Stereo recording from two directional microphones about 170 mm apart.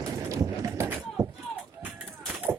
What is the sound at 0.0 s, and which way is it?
Run, 15° right (ahead or behind).